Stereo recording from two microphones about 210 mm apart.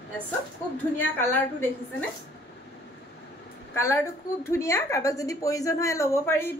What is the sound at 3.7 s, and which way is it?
A woman's voice, 10° left (ahead or behind).